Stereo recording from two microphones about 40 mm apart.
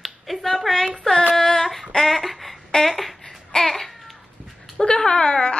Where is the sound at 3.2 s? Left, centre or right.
Centre.